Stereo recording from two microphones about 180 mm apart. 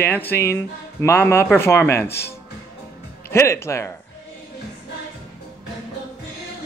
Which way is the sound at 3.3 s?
15° left (ahead or behind).